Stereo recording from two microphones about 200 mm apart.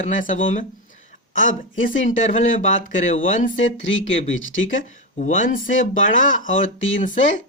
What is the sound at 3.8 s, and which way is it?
Speech, 70° left (ahead or behind).